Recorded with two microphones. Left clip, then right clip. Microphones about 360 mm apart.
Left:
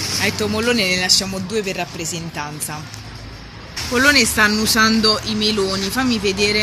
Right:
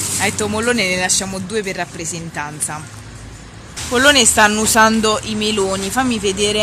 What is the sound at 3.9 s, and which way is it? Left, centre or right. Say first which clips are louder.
Speech: right 3 dB; centre.